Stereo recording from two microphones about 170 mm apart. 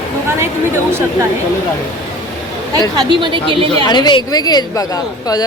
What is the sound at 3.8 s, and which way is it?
A woman's voice, 25° left (ahead or behind).